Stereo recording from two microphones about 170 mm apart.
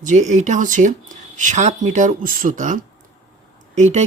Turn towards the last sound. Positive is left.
turn(degrees=-45)  # may be behind; listen again after turning